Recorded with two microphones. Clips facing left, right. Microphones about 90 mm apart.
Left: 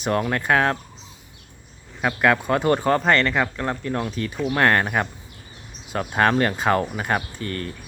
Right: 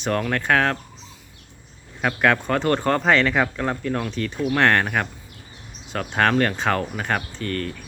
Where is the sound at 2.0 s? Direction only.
5° left (ahead or behind).